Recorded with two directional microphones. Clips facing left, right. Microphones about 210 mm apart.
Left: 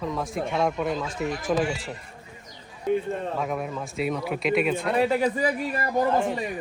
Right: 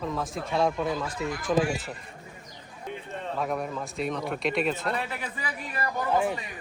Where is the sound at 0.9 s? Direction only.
20° left (ahead or behind).